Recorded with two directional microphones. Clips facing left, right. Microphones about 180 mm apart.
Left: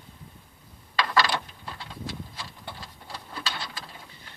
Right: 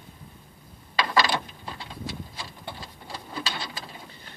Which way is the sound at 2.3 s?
15° right (ahead or behind).